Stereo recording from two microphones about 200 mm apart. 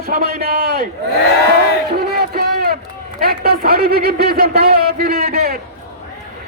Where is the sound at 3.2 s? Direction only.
50° right (ahead or behind).